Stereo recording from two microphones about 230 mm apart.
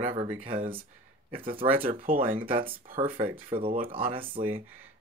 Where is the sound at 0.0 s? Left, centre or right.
Right.